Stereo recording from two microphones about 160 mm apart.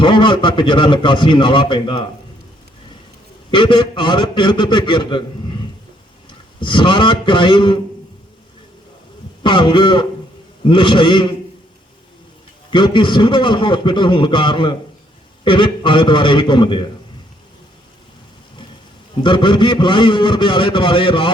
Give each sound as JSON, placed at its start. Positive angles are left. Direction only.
{"t": 0.0, "sound": "a man's voice", "side_deg": 30}
{"t": 3.5, "sound": "a man's voice", "side_deg": 30}
{"t": 6.6, "sound": "a man's voice", "side_deg": 30}
{"t": 9.4, "sound": "a man's voice", "side_deg": 30}
{"t": 12.7, "sound": "a man's voice", "side_deg": 30}
{"t": 19.2, "sound": "a man's voice", "side_deg": 30}